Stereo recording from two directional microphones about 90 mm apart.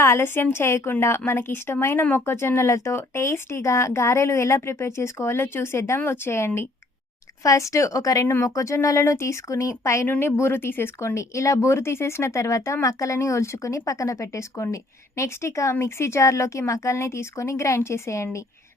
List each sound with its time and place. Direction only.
0.0 s speech: 30° left (ahead or behind)